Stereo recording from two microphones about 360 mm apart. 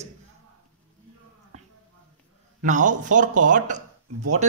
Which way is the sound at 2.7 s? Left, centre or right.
Right.